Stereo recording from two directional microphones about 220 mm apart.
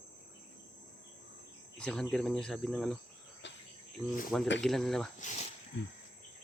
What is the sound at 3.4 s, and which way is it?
Cricket, 55° left (ahead or behind).